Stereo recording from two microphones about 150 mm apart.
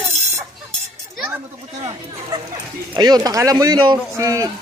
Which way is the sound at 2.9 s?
25° right (ahead or behind).